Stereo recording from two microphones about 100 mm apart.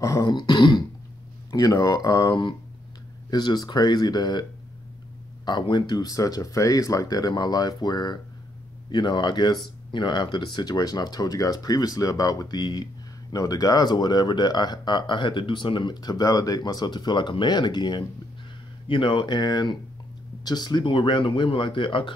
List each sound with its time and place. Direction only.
0.0 s speech: 35° left (ahead or behind)
0.3 s speech: 50° left (ahead or behind)